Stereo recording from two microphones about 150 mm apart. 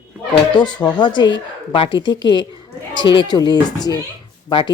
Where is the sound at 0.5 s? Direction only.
30° left (ahead or behind).